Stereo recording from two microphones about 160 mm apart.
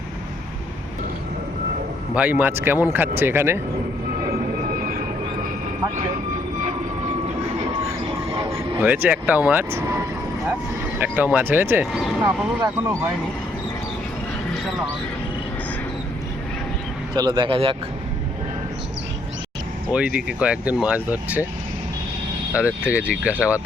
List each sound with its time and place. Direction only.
2.1 s speech: 10° right (ahead or behind)
4.7 s vehicle: 60° right (ahead or behind)
8.4 s speech: 10° right (ahead or behind)
11.0 s speech: 10° right (ahead or behind)
17.2 s speech: 25° right (ahead or behind)
19.9 s speech: 5° right (ahead or behind)
22.5 s speech: 10° right (ahead or behind)